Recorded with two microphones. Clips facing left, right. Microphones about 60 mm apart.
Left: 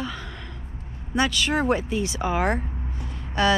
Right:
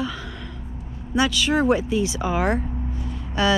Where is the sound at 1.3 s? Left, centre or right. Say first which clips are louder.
Right 5 dB; left.